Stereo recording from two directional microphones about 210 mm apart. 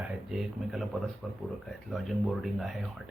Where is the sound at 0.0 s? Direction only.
Centre (ahead or behind).